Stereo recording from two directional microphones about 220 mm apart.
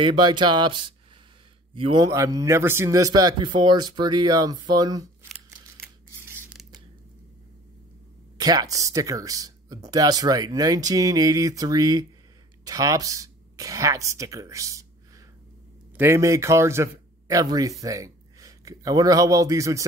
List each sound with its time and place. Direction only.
0.0 s speech: 20° right (ahead or behind)
6.2 s scissors: centre (ahead or behind)
8.4 s speech: 15° right (ahead or behind)
16.0 s speech: 10° right (ahead or behind)